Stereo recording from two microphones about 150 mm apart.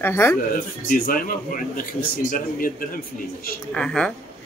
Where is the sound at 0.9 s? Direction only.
70° left (ahead or behind).